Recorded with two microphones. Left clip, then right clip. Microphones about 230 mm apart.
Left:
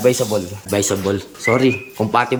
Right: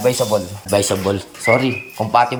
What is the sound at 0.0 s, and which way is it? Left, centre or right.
Speech, centre.